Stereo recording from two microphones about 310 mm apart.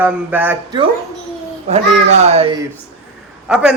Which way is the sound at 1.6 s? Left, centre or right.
Right.